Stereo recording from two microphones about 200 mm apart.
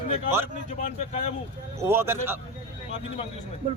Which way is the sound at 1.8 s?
10° right (ahead or behind).